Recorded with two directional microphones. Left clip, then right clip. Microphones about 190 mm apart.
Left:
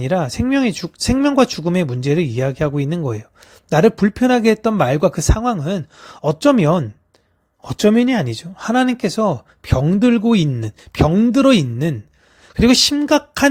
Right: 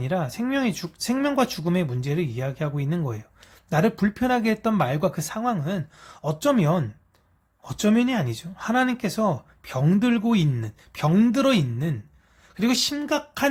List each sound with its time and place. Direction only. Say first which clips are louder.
0.0 s speech: left 8 dB; 35° left (ahead or behind)
11.1 s speech: left 6 dB; 25° left (ahead or behind)
12.5 s speech: left 10 dB; 40° left (ahead or behind)